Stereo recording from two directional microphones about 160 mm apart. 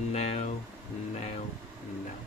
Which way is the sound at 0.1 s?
40° left (ahead or behind).